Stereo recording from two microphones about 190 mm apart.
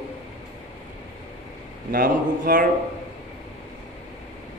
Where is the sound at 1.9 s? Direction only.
50° right (ahead or behind).